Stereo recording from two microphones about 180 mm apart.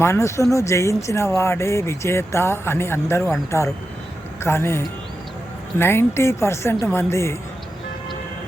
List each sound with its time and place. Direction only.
0.0 s speech: 15° left (ahead or behind)